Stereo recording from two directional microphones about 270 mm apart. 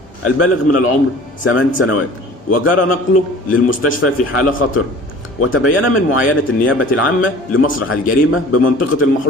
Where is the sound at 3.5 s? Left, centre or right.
Left.